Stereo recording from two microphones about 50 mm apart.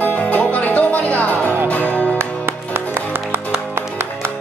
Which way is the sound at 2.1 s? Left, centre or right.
Right.